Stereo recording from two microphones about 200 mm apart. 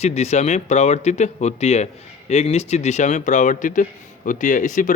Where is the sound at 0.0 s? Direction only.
35° left (ahead or behind).